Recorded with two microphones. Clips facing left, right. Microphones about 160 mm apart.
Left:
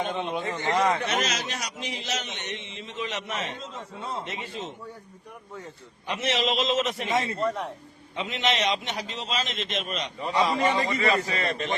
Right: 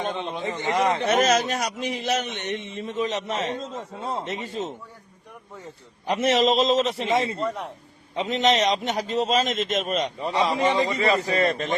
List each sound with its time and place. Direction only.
0.5 s speech: 20° right (ahead or behind)
1.0 s a man's voice: 50° right (ahead or behind)
6.1 s a man's voice: 45° right (ahead or behind); by 7.4 s 30° right (ahead or behind)
7.4 s a man's voice: centre (ahead or behind)
8.1 s a man's voice: 40° right (ahead or behind)
10.3 s a man's voice: 15° right (ahead or behind)
11.0 s a man's voice: 40° right (ahead or behind)